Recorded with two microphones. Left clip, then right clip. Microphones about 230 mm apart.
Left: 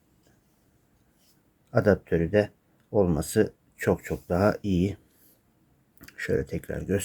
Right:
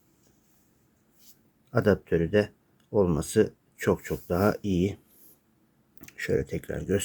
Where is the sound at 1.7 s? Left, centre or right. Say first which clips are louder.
Left 1 dB; centre.